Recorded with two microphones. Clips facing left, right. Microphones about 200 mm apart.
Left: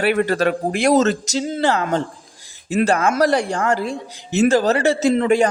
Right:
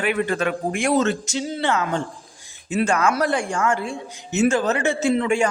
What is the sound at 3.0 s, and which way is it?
A man's voice, 40° left (ahead or behind).